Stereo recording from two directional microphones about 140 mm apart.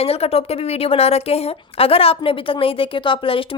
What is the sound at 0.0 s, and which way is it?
A woman's voice, 45° left (ahead or behind).